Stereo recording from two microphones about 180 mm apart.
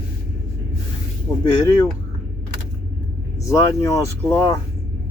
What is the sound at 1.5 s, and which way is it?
Speech, 20° left (ahead or behind).